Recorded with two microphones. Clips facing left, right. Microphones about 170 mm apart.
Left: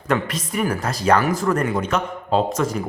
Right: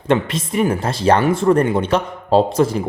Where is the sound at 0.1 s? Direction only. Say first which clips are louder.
Right 5 dB; 25° right (ahead or behind).